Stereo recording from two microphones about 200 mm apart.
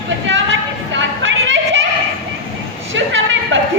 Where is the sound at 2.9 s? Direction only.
70° right (ahead or behind).